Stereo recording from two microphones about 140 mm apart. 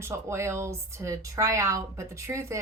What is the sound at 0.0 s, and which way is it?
A woman's voice, 20° right (ahead or behind).